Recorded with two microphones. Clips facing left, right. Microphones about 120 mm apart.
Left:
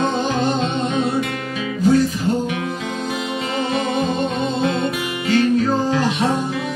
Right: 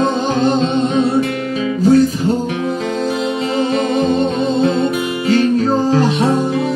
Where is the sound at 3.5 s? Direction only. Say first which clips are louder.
Right 4 dB; 35° right (ahead or behind).